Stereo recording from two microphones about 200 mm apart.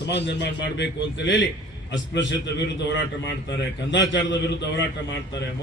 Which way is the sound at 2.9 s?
60° left (ahead or behind).